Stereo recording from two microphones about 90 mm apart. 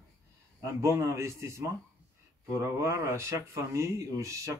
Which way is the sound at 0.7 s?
35° right (ahead or behind).